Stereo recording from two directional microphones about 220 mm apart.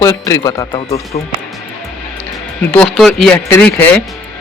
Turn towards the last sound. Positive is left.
turn(degrees=5)  # may be behind; listen again after turning